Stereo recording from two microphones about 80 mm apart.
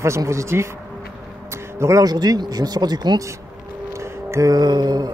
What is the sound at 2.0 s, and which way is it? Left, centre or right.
Speech, right.